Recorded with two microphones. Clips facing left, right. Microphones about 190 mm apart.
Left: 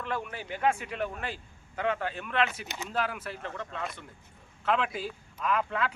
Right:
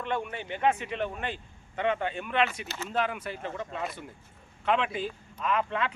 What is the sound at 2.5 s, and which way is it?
Speech, 15° left (ahead or behind).